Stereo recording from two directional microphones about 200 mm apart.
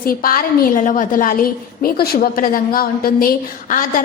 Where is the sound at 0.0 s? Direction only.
45° left (ahead or behind).